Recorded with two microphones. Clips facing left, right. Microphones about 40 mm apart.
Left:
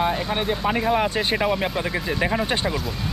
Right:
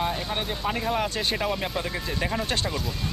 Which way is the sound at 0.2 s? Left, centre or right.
Centre.